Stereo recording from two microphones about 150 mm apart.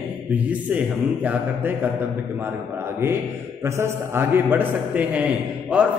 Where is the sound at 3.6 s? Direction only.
15° right (ahead or behind).